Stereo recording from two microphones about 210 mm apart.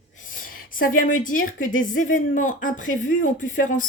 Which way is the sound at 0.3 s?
40° left (ahead or behind).